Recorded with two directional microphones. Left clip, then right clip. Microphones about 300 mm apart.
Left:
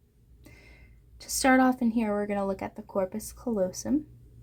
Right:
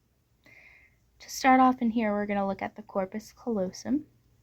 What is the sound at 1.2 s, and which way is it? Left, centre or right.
Speech, right.